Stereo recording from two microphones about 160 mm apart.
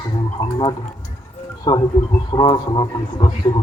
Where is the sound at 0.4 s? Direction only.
15° left (ahead or behind).